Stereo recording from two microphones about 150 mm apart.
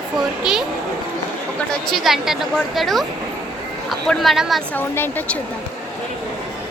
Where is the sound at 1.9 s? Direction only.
Centre (ahead or behind).